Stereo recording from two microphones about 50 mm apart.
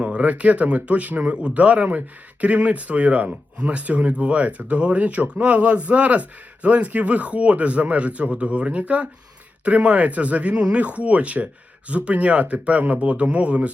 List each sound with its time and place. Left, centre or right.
0.0 s speech: right